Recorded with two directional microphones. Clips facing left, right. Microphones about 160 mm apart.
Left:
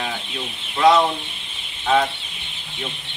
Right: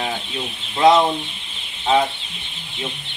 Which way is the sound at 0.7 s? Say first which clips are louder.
Right 1 dB; 25° right (ahead or behind).